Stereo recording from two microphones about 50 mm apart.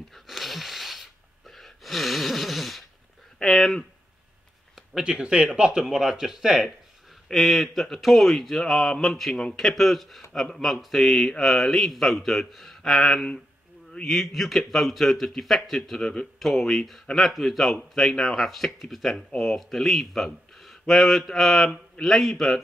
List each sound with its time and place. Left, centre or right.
0.1 s wheeze: centre
1.5 s gasp: centre
3.4 s speech: centre
5.0 s speech: centre
5.8 s a man's voice: centre